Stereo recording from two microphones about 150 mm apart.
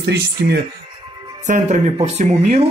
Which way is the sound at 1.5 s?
50° right (ahead or behind).